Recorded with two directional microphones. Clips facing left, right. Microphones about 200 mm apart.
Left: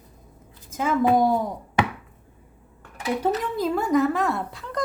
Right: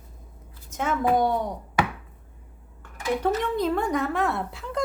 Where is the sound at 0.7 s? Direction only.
Centre (ahead or behind).